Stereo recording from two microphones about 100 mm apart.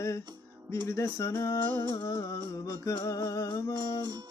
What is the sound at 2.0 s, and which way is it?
Male singing, 30° left (ahead or behind).